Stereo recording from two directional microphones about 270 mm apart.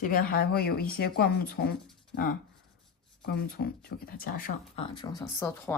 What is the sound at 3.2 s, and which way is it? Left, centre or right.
Speech, left.